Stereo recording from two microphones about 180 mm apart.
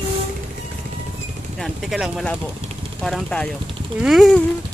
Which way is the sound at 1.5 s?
Centre (ahead or behind).